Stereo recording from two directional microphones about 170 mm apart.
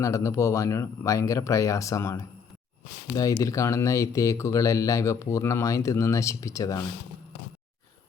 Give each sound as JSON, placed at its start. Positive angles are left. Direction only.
{"t": 0.0, "sound": "speech", "side_deg": 15}